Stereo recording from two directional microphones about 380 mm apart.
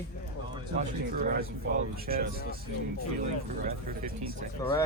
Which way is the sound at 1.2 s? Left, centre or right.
Right.